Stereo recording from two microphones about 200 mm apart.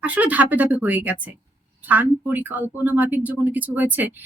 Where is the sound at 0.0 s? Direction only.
5° right (ahead or behind).